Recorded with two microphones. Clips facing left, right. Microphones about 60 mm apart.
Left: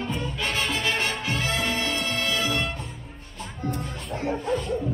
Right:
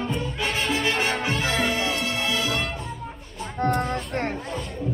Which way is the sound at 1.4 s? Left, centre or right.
Right.